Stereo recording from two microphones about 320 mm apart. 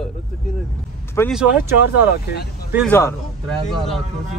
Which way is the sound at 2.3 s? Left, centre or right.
Left.